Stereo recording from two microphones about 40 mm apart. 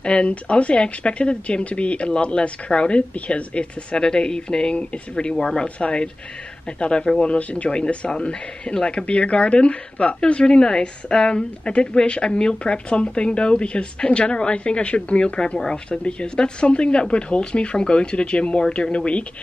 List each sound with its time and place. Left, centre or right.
0.0 s speech: left
4.0 s speech: centre
5.3 s speech: centre